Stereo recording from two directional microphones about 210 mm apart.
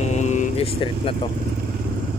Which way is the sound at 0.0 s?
35° left (ahead or behind).